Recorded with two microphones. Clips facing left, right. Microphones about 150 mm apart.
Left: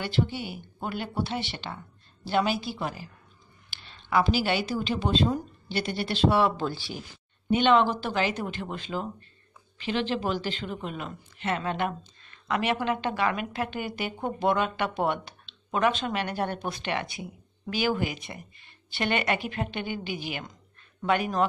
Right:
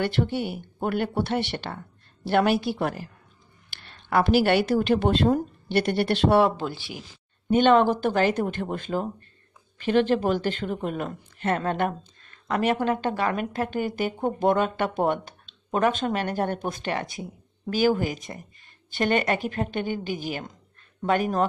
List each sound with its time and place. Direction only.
0.0 s speech: 60° right (ahead or behind)
6.6 s speech: 20° right (ahead or behind)
7.4 s a man's voice: 45° right (ahead or behind)